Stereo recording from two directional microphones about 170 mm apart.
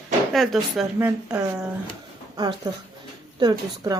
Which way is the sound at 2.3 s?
25° right (ahead or behind).